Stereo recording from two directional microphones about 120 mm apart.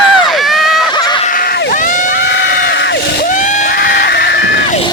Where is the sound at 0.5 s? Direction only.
Centre (ahead or behind).